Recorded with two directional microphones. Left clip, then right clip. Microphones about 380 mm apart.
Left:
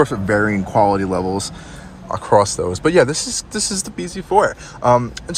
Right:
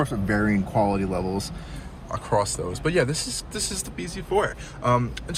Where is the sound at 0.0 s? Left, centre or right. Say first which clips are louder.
Left 9 dB; centre.